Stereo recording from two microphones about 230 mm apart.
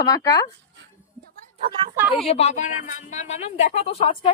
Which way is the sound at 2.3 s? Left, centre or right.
Left.